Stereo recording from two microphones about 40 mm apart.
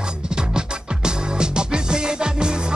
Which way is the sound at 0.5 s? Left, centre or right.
Centre.